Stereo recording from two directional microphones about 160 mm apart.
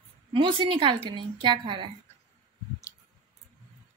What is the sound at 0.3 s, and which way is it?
A woman's voice, 30° right (ahead or behind).